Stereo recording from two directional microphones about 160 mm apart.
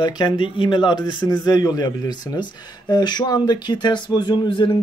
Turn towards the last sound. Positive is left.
turn(degrees=30)  # may be behind; listen again after turning